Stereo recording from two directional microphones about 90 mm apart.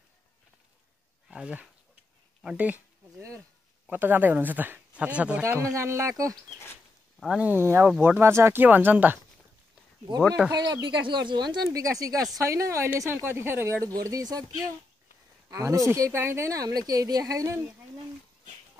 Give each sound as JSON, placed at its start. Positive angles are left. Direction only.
{"t": 1.3, "sound": "speech", "side_deg": -15}
{"t": 3.8, "sound": "speech", "side_deg": -20}
{"t": 5.4, "sound": "speech", "side_deg": -30}
{"t": 7.2, "sound": "speech", "side_deg": -5}
{"t": 7.4, "sound": "speech", "side_deg": -25}
{"t": 10.5, "sound": "speech", "side_deg": -50}
{"t": 11.8, "sound": "speech", "side_deg": -40}
{"t": 14.0, "sound": "speech", "side_deg": -45}
{"t": 15.5, "sound": "speech", "side_deg": -40}